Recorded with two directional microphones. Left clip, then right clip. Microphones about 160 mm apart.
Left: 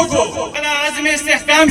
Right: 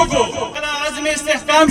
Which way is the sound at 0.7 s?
45° right (ahead or behind).